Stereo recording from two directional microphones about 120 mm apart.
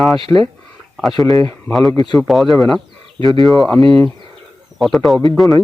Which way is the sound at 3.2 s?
45° right (ahead or behind).